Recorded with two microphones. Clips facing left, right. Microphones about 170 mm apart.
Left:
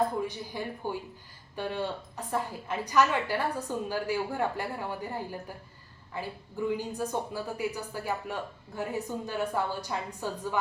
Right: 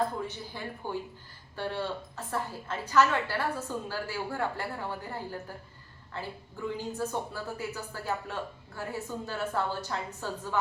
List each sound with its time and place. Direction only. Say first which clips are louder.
0.2 s speech: left 4 dB; 15° left (ahead or behind)